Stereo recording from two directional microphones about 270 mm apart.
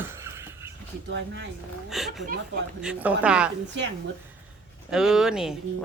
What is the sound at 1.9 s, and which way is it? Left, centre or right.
A woman's voice, centre.